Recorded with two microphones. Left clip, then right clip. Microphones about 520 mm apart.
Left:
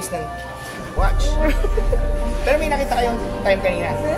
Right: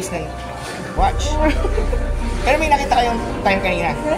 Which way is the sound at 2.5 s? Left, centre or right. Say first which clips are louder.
Right 4 dB; left.